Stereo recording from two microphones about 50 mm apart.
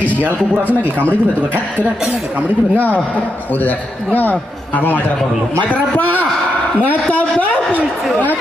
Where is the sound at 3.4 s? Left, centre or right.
Left.